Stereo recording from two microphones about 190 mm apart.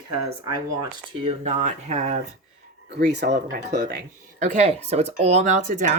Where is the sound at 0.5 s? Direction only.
25° right (ahead or behind); by 2.1 s 40° right (ahead or behind).